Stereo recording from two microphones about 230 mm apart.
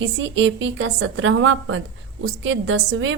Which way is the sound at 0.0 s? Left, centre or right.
Right.